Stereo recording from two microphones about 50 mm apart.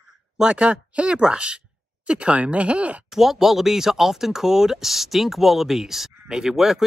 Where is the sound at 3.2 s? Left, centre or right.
Centre.